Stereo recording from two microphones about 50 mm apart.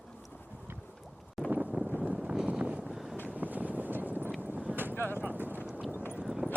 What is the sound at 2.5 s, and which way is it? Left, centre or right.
Vehicle, right.